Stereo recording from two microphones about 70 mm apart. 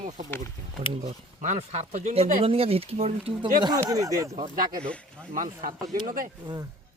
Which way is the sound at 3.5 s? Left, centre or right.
Right.